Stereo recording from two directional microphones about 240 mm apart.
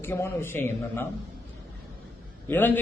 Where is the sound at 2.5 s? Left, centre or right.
Centre.